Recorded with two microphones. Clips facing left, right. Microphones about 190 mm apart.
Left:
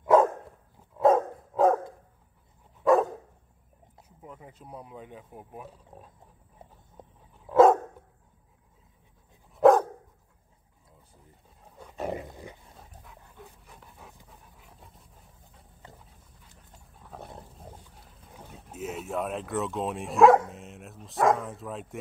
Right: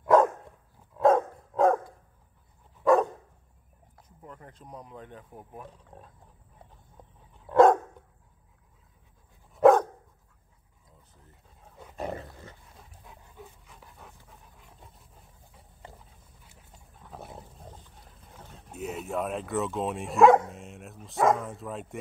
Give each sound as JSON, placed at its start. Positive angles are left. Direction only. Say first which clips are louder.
{"t": 0.0, "sound": "dog", "louder": "even", "side_deg": 0}
{"t": 2.8, "sound": "dog", "louder": "even", "side_deg": 0}
{"t": 4.2, "sound": "speech", "louder": "left 1 dB", "side_deg": 5}
{"t": 7.0, "sound": "dog", "louder": "left 4 dB", "side_deg": 20}
{"t": 7.4, "sound": "dog", "louder": "left 1 dB", "side_deg": 5}
{"t": 9.5, "sound": "dog", "louder": "even", "side_deg": 0}
{"t": 11.8, "sound": "dog", "louder": "left 1 dB", "side_deg": 0}
{"t": 12.1, "sound": "dog", "louder": "left 3 dB", "side_deg": 15}
{"t": 13.4, "sound": "dog", "louder": "right 1 dB", "side_deg": 0}
{"t": 14.6, "sound": "roaring cats", "louder": "even", "side_deg": 0}
{"t": 17.0, "sound": "dog", "louder": "even", "side_deg": -5}
{"t": 17.9, "sound": "wild animals", "louder": "even", "side_deg": 0}
{"t": 18.7, "sound": "speech", "louder": "even", "side_deg": 0}